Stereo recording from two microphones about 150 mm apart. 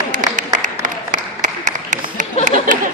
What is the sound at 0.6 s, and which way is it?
Applause, 60° right (ahead or behind).